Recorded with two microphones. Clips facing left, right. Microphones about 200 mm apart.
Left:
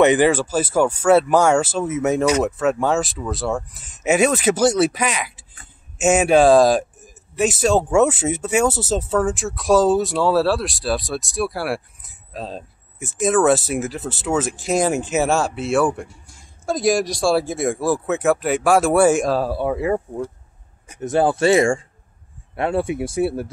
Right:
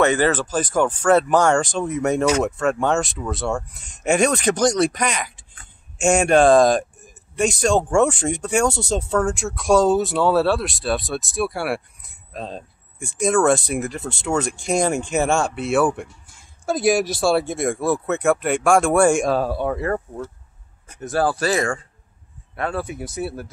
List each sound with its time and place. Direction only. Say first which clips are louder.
0.0 s speech: left 3 dB; 15° left (ahead or behind)
21.0 s speech: left 4 dB; 20° left (ahead or behind)